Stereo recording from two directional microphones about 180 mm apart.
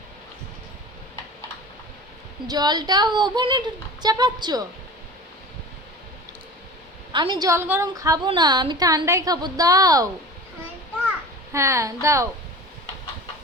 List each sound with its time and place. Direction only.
2.5 s a woman's voice: 20° right (ahead or behind)
7.1 s a woman's voice: 25° right (ahead or behind)
11.5 s speech: 15° right (ahead or behind)